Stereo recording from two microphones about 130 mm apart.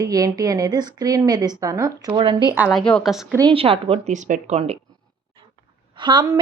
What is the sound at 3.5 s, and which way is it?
Speech, 45° right (ahead or behind).